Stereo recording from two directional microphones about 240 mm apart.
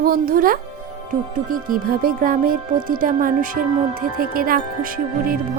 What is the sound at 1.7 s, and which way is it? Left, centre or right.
Speech, right.